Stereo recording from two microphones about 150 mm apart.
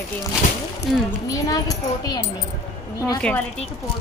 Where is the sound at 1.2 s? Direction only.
25° left (ahead or behind).